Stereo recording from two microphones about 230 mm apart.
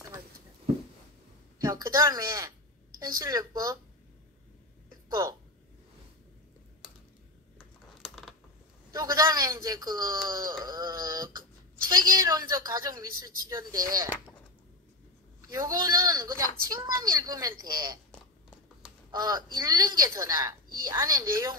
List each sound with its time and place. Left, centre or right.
1.6 s a woman's voice: centre
7.5 s typing: centre
8.9 s speech: centre
15.4 s speech: centre
19.1 s speech: centre